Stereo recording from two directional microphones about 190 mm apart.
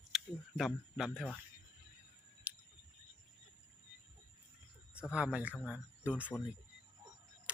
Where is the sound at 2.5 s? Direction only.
10° right (ahead or behind).